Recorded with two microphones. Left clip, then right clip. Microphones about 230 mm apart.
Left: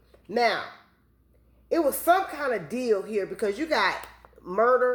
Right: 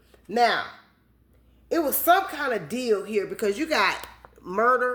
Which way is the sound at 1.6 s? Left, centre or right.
Right.